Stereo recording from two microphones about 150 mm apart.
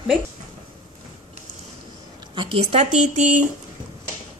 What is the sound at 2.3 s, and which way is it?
Speech, 35° right (ahead or behind).